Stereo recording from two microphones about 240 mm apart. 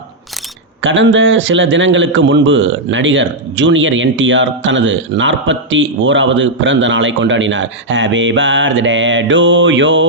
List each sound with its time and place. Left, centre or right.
0.8 s a man's voice: right